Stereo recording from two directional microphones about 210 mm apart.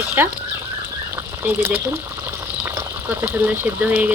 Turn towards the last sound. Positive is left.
turn(degrees=-10)  # may be behind; listen again after turning